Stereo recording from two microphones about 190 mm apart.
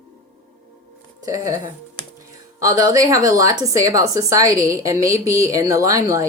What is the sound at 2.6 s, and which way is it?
A woman's voice, 15° right (ahead or behind).